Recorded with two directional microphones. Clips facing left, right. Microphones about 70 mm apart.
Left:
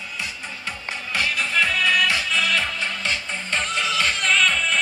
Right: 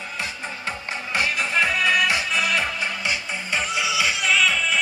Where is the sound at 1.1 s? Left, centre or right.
Right.